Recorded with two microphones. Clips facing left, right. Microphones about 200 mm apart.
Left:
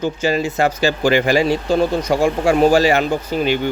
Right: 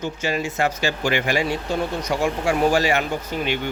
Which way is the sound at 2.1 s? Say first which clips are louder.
Left 6 dB; 35° left (ahead or behind).